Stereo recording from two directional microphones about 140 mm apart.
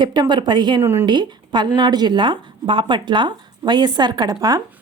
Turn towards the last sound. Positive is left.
turn(degrees=-30)  # may be behind; listen again after turning